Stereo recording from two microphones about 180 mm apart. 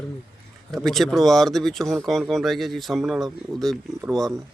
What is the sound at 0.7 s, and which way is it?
Speech, centre (ahead or behind).